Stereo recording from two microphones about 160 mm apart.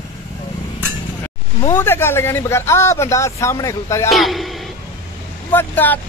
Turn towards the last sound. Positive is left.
turn(degrees=10)  # may be behind; listen again after turning